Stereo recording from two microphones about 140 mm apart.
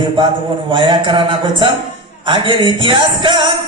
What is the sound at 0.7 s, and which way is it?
Music, 35° right (ahead or behind).